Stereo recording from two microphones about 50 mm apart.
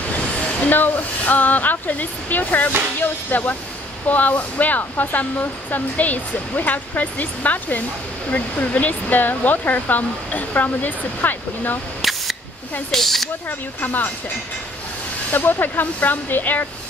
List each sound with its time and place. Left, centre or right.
0.7 s speech: left
12.0 s a sound: centre
12.9 s speech: centre
13.5 s speech: left
15.3 s speech: left